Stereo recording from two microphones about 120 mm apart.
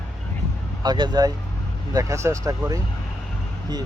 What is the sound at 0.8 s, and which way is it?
Speech, 40° right (ahead or behind).